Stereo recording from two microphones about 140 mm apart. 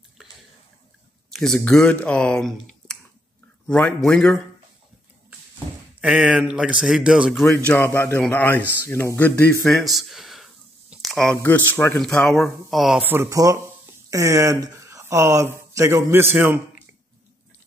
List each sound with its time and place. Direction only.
1.3 s a man's voice: 5° left (ahead or behind)
5.9 s speech: 5° right (ahead or behind)
7.4 s a man's voice: 15° left (ahead or behind)
11.4 s speech: 15° left (ahead or behind)
13.0 s speech: 15° right (ahead or behind)